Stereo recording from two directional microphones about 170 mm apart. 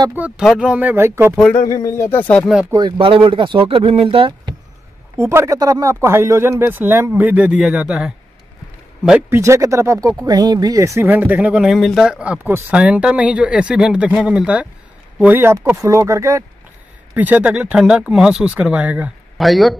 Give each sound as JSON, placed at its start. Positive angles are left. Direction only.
{"t": 0.1, "sound": "speech", "side_deg": -10}
{"t": 1.7, "sound": "speech", "side_deg": 20}
{"t": 2.7, "sound": "speech", "side_deg": -30}
{"t": 5.1, "sound": "speech", "side_deg": -15}
{"t": 9.3, "sound": "speech", "side_deg": -15}